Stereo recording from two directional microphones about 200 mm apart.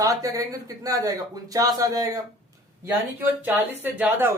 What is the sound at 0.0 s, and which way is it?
A woman's voice, 15° right (ahead or behind).